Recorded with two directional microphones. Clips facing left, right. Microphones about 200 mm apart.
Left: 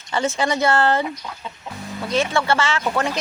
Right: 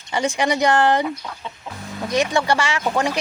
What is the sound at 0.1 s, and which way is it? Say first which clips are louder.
Speech: right 1 dB; 15° right (ahead or behind).